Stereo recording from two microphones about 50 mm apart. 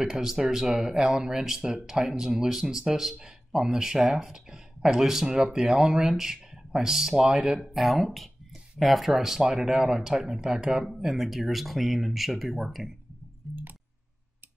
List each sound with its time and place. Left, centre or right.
0.0 s speech: centre
7.7 s speech: centre
13.4 s clicking: centre